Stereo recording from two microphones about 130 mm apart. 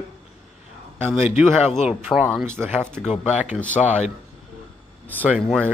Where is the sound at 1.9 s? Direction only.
5° right (ahead or behind).